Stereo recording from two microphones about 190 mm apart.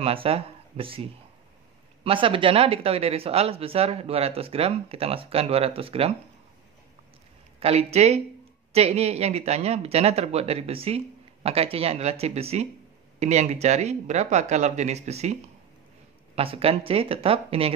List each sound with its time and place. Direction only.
0.0 s speech: 30° right (ahead or behind)
2.0 s speech: 30° right (ahead or behind)
7.6 s speech: 35° right (ahead or behind)
16.3 s speech: 30° right (ahead or behind)